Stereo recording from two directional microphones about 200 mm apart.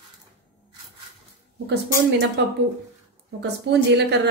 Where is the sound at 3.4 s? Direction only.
60° right (ahead or behind).